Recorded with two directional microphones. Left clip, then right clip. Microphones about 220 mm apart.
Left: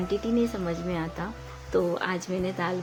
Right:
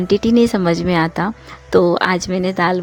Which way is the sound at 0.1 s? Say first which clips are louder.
Right 14 dB; 45° right (ahead or behind).